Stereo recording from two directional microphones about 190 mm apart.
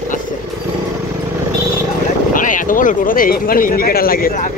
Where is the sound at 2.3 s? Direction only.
45° left (ahead or behind).